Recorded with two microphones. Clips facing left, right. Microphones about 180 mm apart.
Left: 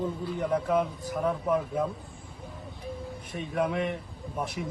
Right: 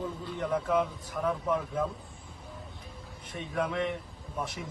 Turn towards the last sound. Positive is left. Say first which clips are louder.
# left 2 dB
turn(degrees=0)  # may be behind; listen again after turning